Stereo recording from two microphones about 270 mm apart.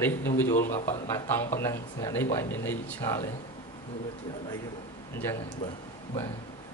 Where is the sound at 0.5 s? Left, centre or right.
Left.